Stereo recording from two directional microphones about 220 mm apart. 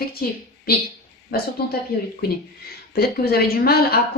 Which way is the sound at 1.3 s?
45° left (ahead or behind).